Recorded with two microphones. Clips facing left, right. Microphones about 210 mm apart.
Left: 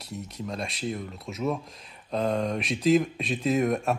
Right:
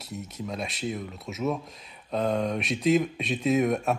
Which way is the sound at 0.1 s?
Centre (ahead or behind).